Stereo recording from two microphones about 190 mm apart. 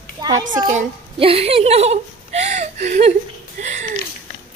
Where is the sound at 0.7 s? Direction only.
35° right (ahead or behind).